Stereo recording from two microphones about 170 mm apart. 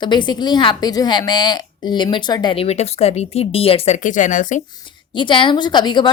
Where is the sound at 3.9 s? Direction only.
50° left (ahead or behind).